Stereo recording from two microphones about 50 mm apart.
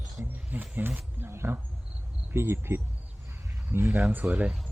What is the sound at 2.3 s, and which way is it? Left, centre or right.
A woman's voice, right.